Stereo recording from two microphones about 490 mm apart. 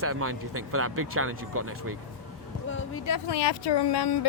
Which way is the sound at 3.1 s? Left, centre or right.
Left.